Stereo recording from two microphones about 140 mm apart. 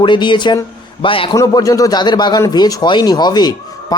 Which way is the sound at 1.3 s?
25° left (ahead or behind).